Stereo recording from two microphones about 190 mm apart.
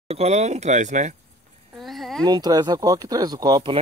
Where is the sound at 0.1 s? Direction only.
35° right (ahead or behind).